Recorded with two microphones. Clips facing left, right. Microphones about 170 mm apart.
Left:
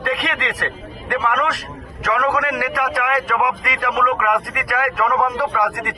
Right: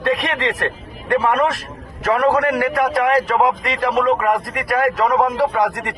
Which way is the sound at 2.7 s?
30° right (ahead or behind).